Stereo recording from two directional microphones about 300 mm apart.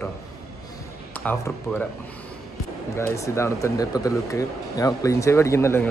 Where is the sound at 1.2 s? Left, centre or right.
Centre.